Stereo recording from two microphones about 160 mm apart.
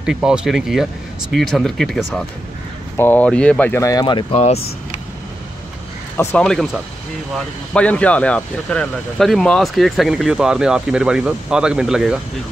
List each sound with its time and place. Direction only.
0.0 s speech: 5° right (ahead or behind); by 4.3 s 30° left (ahead or behind)
4.3 s speech: 45° left (ahead or behind)
6.1 s speech: 5° left (ahead or behind)